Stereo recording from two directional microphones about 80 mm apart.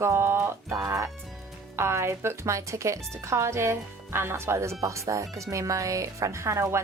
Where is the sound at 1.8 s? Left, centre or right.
Right.